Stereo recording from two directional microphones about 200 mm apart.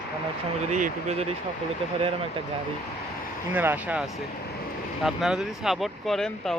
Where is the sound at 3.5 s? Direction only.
10° right (ahead or behind).